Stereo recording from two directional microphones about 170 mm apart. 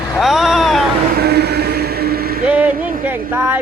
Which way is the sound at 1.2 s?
70° right (ahead or behind).